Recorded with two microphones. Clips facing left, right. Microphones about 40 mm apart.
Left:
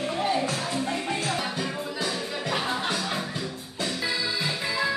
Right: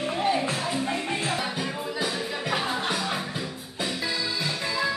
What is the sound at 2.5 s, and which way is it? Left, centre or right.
Music, centre.